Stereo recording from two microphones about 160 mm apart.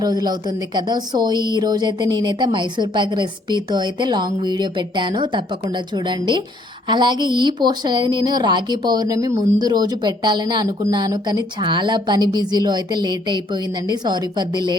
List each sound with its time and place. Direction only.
0.0 s speech: 25° right (ahead or behind)